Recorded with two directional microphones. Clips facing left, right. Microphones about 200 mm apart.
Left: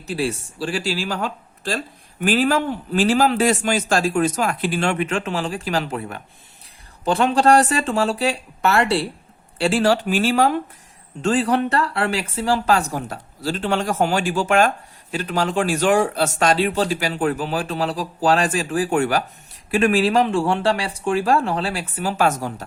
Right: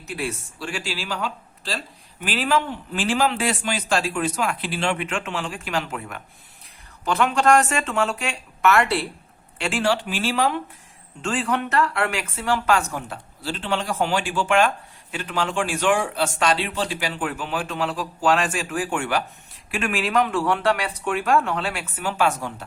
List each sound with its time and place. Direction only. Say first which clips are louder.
0.1 s speech: left 6 dB; 30° left (ahead or behind)